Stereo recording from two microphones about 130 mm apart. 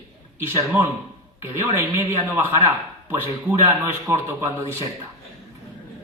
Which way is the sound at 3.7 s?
20° right (ahead or behind).